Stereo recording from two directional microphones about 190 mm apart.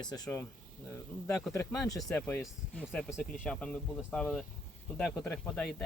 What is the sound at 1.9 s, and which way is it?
Speech, 20° left (ahead or behind).